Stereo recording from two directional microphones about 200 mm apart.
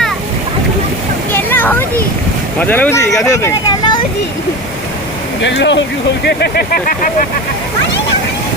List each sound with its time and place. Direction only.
1.3 s a sound: 10° left (ahead or behind)
2.6 s speech: 10° left (ahead or behind)
5.4 s speech: 65° left (ahead or behind)
6.2 s speech: 55° left (ahead or behind)